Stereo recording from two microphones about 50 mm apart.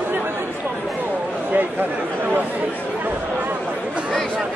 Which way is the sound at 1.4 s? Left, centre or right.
Right.